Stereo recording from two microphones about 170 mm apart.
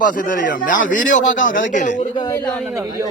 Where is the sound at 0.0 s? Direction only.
50° left (ahead or behind).